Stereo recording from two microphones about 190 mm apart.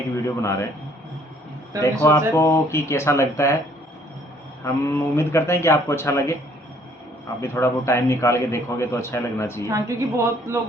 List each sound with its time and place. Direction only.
0.3 s a man's voice: 15° left (ahead or behind)
1.8 s a man's voice: 15° left (ahead or behind)
4.6 s a man's voice: 15° left (ahead or behind)
7.4 s a man's voice: 15° left (ahead or behind)
9.6 s a woman's voice: 15° right (ahead or behind)